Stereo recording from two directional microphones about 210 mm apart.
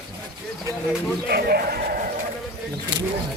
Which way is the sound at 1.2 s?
50° right (ahead or behind).